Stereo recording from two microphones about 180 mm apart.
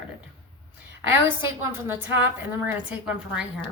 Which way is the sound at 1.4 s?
15° right (ahead or behind).